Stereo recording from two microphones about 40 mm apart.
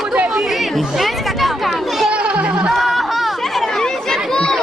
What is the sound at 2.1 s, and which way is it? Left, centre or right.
Music, right.